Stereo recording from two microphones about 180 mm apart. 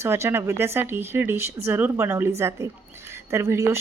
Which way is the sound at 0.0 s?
15° right (ahead or behind).